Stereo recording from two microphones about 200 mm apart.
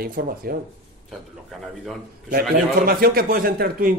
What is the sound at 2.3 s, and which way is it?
A man's voice, 50° right (ahead or behind).